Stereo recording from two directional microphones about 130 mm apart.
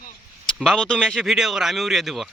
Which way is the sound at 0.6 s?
5° left (ahead or behind).